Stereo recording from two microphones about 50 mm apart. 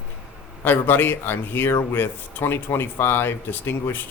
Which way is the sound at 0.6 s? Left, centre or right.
Left.